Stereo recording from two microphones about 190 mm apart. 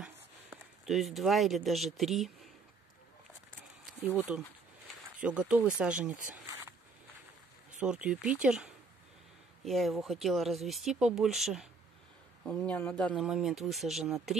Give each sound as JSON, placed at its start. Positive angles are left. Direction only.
{"t": 0.0, "sound": "speech", "side_deg": 0}
{"t": 4.0, "sound": "speech", "side_deg": -10}
{"t": 7.8, "sound": "speech", "side_deg": -5}